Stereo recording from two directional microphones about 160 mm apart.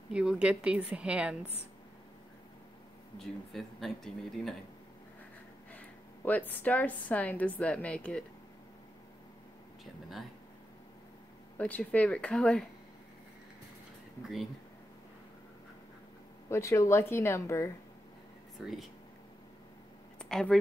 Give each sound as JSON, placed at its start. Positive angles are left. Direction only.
{"t": 0.1, "sound": "a woman's voice", "side_deg": -5}
{"t": 3.2, "sound": "speech", "side_deg": 0}
{"t": 5.7, "sound": "a woman's voice", "side_deg": 10}
{"t": 11.5, "sound": "a woman's voice", "side_deg": 10}
{"t": 16.4, "sound": "a woman's voice", "side_deg": 15}
{"t": 18.6, "sound": "speech", "side_deg": 0}
{"t": 20.2, "sound": "a sound", "side_deg": 5}